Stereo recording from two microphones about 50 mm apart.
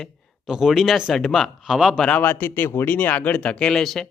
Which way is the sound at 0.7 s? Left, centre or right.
Centre.